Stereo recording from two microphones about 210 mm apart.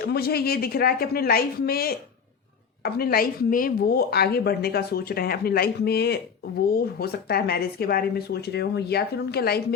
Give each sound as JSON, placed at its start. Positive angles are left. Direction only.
{"t": 0.0, "sound": "a woman's voice", "side_deg": 45}